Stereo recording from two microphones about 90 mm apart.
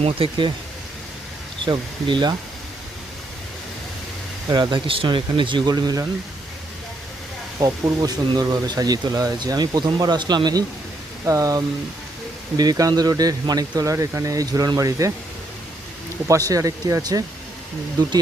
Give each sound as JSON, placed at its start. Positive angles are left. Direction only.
{"t": 0.0, "sound": "speech", "side_deg": -75}
{"t": 1.6, "sound": "speech", "side_deg": -60}
{"t": 4.4, "sound": "speech", "side_deg": -45}
{"t": 4.7, "sound": "speech", "side_deg": -70}
{"t": 5.7, "sound": "speech", "side_deg": -45}
{"t": 7.6, "sound": "speech", "side_deg": -45}
{"t": 11.3, "sound": "speech", "side_deg": -40}
{"t": 13.9, "sound": "speech", "side_deg": -35}
{"t": 16.2, "sound": "speech", "side_deg": -35}